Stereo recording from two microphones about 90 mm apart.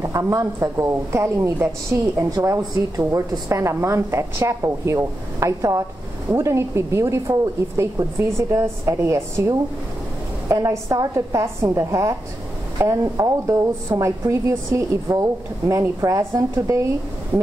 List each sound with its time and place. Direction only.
0.0 s a woman's voice: 35° right (ahead or behind)